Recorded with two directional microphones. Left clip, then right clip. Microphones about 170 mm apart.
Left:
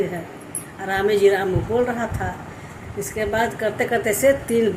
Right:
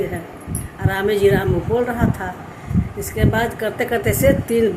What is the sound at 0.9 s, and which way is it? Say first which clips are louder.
Speech: right 1 dB; 15° right (ahead or behind).